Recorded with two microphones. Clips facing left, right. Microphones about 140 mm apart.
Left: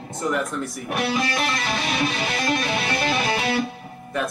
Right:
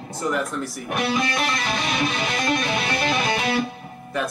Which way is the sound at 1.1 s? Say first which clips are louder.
Even; 35° left (ahead or behind).